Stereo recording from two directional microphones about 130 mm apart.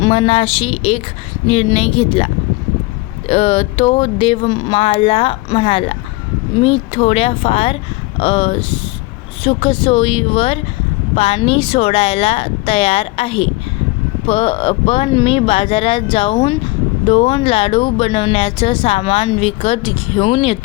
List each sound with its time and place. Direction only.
0.1 s a woman's voice: 45° left (ahead or behind)